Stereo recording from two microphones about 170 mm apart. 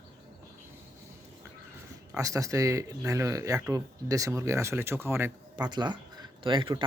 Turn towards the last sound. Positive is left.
turn(degrees=-30)  # may be behind; listen again after turning